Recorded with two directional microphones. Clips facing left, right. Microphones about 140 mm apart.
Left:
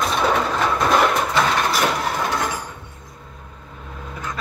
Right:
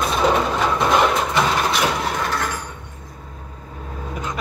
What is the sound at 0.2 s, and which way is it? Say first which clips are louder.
Bird: right 3 dB; 15° right (ahead or behind).